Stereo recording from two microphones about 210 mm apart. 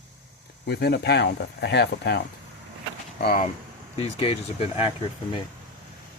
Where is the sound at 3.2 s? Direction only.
45° left (ahead or behind).